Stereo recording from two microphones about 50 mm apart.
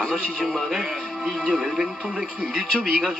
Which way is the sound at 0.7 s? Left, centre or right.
Centre.